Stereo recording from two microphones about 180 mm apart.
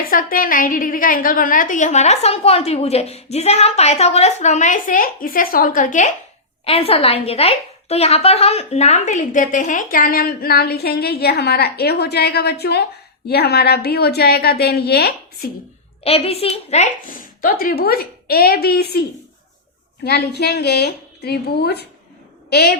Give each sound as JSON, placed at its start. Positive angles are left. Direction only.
{"t": 0.0, "sound": "a woman's voice", "side_deg": 50}
{"t": 6.7, "sound": "a woman's voice", "side_deg": 35}
{"t": 16.0, "sound": "a woman's voice", "side_deg": 35}
{"t": 20.1, "sound": "a woman's voice", "side_deg": 65}